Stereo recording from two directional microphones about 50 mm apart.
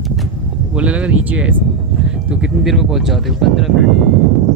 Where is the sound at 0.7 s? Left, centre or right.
Right.